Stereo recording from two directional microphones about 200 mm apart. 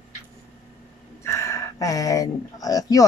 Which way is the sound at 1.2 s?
15° left (ahead or behind).